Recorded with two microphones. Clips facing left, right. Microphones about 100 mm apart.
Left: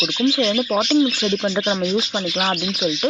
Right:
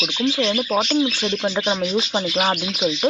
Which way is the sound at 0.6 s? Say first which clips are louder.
Left 1 dB; 15° left (ahead or behind).